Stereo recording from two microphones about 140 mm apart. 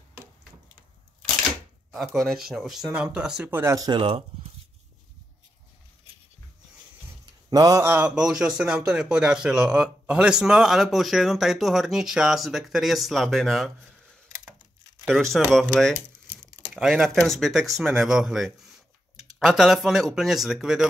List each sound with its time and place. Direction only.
2.0 s a man's voice: centre (ahead or behind)
3.7 s speech: 25° right (ahead or behind)
4.0 s speech: 40° right (ahead or behind)
7.5 s a man's voice: 25° right (ahead or behind); by 13.7 s centre (ahead or behind)
15.0 s a man's voice: centre (ahead or behind)
16.7 s speech: centre (ahead or behind)